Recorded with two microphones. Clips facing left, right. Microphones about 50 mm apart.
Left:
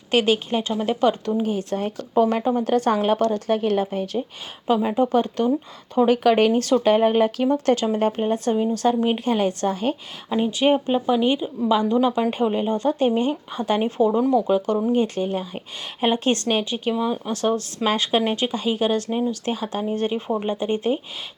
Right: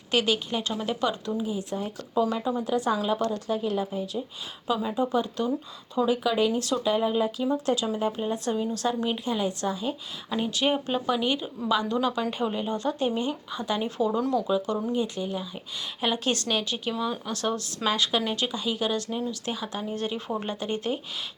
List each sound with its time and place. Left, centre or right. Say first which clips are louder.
0.1 s speech: left 6 dB; left
2.2 s speech: left 7 dB; left
4.6 s speech: left 7 dB; left
5.9 s speech: left 8 dB; left
10.2 s speech: left 7 dB; left